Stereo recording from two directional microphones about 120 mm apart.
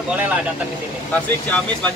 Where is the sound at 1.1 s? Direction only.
15° left (ahead or behind).